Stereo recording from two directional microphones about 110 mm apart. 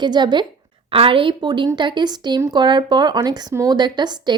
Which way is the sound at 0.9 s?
55° right (ahead or behind).